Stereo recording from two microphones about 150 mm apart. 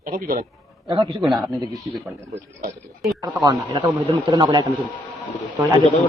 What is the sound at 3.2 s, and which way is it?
A man's voice, 25° right (ahead or behind).